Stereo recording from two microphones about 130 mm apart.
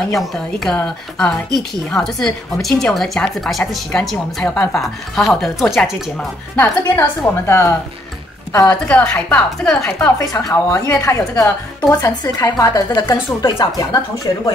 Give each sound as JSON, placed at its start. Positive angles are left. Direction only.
{"t": 0.1, "sound": "a woman's voice", "side_deg": 0}
{"t": 6.1, "sound": "a woman's voice", "side_deg": 10}
{"t": 10.1, "sound": "a woman's voice", "side_deg": 20}